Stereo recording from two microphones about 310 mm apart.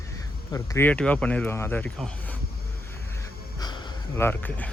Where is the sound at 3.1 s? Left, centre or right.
Centre.